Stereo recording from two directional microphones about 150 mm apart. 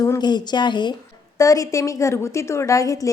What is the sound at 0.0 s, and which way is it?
A woman's voice, 25° left (ahead or behind).